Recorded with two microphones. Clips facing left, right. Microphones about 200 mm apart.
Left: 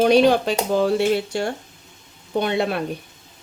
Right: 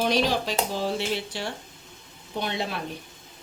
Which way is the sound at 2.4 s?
55° left (ahead or behind).